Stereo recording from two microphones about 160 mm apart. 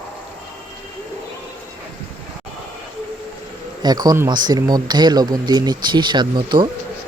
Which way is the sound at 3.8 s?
25° right (ahead or behind).